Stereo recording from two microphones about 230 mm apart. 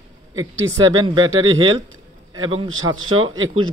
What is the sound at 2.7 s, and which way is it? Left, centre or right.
Speech, right.